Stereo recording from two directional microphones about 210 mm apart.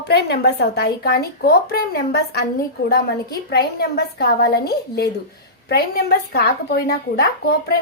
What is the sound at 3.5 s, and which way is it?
A woman's voice, 50° left (ahead or behind).